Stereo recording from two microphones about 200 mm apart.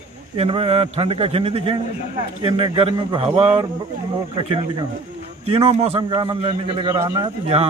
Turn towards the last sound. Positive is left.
turn(degrees=-30)  # may be behind; listen again after turning